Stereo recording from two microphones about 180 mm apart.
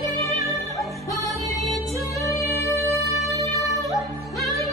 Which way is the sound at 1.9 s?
15° left (ahead or behind).